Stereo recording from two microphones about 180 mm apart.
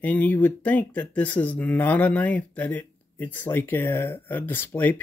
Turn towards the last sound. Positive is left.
turn(degrees=10)  # may be behind; listen again after turning